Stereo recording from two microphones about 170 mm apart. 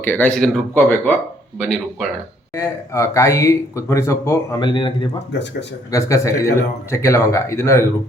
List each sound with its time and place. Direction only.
0.0 s speech: 10° left (ahead or behind)
2.6 s speech: 15° left (ahead or behind)
5.3 s speech: 90° left
5.9 s speech: 15° left (ahead or behind)